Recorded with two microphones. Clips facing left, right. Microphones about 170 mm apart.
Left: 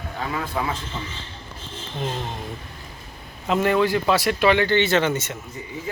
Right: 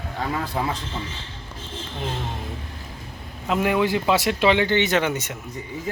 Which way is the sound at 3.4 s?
5° right (ahead or behind).